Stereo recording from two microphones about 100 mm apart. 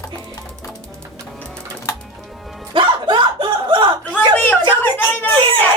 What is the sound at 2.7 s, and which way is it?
Music, 50° right (ahead or behind).